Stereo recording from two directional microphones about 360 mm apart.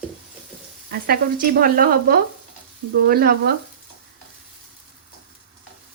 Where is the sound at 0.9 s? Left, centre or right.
Right.